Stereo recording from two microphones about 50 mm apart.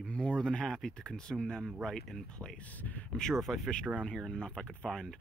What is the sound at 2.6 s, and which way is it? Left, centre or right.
Speech, left.